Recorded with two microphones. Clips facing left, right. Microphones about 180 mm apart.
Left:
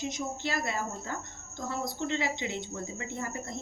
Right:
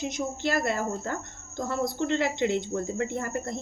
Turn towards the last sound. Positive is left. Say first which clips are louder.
# right 6 dB
turn(degrees=-60)  # may be behind; listen again after turning